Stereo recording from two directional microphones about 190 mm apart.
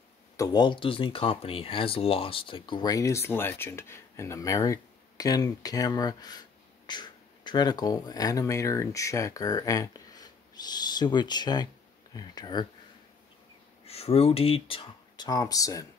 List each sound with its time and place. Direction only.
0.4 s speech: 20° left (ahead or behind)
13.8 s speech: 30° left (ahead or behind); by 15.9 s 15° left (ahead or behind)